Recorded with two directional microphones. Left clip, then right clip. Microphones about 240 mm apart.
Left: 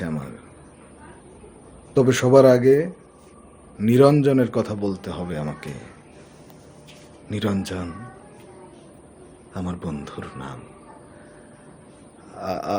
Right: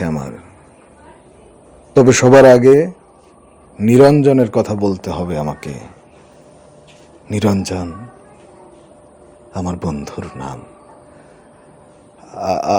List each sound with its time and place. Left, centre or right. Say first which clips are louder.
0.0 s a sound: right 8 dB; right
1.9 s a man's voice: right 8 dB; right
7.3 s a man's voice: right 9 dB; right
9.5 s a man's voice: right 9 dB; right
12.3 s a man's voice: right 10 dB; right